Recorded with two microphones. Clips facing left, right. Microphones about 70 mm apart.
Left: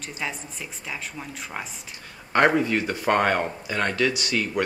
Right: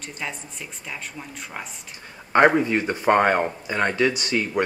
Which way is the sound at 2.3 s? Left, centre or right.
Centre.